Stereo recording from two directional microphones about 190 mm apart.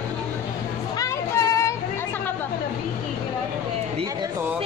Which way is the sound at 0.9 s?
15° left (ahead or behind).